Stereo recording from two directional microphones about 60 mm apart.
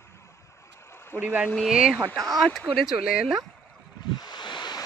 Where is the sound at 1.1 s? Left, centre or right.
Left.